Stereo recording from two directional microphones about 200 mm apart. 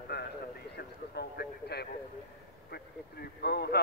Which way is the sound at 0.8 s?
55° left (ahead or behind).